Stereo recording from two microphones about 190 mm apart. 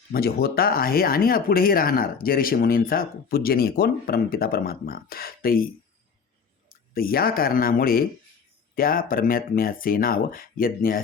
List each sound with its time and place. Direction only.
0.1 s speech: 55° left (ahead or behind)
6.9 s speech: 50° left (ahead or behind)